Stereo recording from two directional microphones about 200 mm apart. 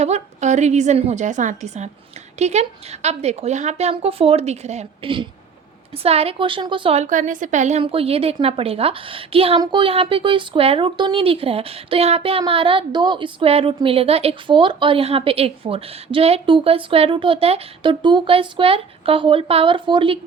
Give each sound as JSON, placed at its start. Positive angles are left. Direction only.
{"t": 0.0, "sound": "a woman's voice", "side_deg": -35}